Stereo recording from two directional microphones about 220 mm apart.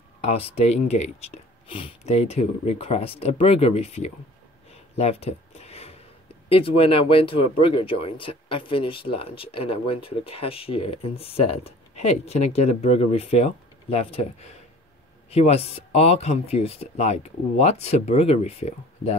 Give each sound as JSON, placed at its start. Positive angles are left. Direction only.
{"t": 0.2, "sound": "speech", "side_deg": 25}
{"t": 4.9, "sound": "a sound", "side_deg": 30}
{"t": 6.5, "sound": "speech", "side_deg": 25}